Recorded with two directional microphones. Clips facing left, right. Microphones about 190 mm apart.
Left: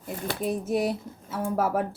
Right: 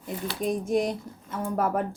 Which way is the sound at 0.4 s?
5° left (ahead or behind).